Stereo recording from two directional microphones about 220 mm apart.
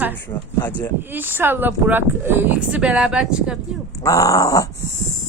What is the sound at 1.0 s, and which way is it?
Speech, 10° right (ahead or behind).